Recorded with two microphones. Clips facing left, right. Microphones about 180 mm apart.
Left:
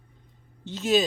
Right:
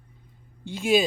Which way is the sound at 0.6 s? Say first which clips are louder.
Right 1 dB; 10° right (ahead or behind).